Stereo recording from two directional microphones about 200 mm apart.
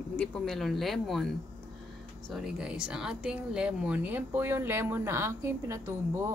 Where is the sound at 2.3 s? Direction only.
5° right (ahead or behind).